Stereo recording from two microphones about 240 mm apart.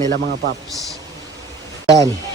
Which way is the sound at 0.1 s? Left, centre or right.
Right.